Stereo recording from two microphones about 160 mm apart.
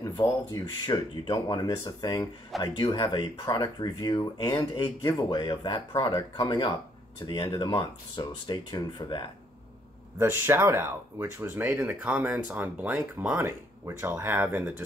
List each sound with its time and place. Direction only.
0.0 s speech: 25° left (ahead or behind)
10.1 s speech: 15° right (ahead or behind)